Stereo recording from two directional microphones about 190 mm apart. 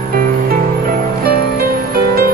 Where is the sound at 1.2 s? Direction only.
55° right (ahead or behind).